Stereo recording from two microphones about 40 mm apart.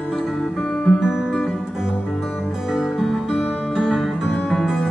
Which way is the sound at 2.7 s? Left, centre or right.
Centre.